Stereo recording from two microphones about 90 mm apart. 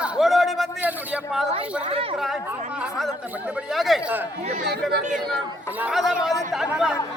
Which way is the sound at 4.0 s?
15° right (ahead or behind).